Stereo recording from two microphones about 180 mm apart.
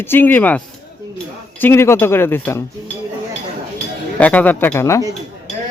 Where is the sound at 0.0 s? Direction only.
10° left (ahead or behind).